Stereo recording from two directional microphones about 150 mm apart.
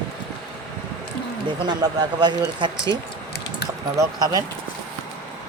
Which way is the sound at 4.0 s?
25° right (ahead or behind).